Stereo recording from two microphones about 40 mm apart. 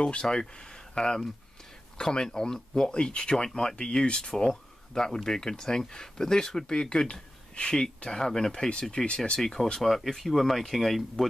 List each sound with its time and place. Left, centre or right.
0.0 s speech: left
9.8 s speech: centre